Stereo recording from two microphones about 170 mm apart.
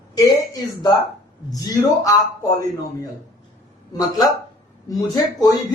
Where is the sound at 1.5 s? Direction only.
20° left (ahead or behind).